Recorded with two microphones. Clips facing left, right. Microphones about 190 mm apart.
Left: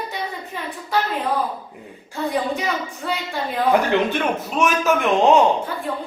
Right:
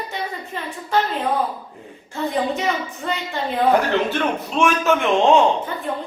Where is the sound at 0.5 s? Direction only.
10° left (ahead or behind).